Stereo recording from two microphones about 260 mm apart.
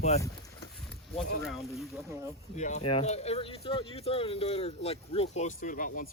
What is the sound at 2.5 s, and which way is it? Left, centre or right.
Speech, left.